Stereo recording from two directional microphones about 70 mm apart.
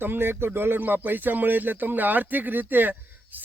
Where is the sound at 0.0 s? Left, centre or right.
Right.